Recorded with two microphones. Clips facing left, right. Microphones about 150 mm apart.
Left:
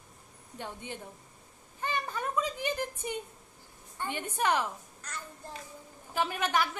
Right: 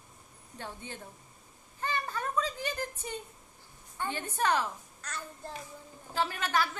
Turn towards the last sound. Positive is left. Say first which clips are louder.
# left 1 dB
turn(degrees=15)  # may be behind; listen again after turning